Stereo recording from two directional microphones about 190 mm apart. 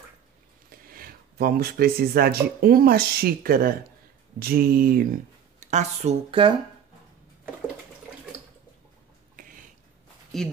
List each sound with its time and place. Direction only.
0.7 s speech: 50° right (ahead or behind)
5.7 s speech: 35° right (ahead or behind)
10.3 s speech: centre (ahead or behind)